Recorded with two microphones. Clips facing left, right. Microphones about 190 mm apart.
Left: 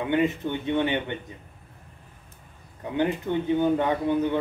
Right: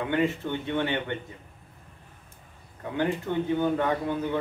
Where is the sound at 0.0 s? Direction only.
20° left (ahead or behind).